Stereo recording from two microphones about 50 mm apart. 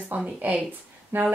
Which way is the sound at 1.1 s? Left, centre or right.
Right.